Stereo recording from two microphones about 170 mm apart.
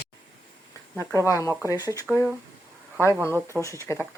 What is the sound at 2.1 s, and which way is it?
Speech, 5° right (ahead or behind).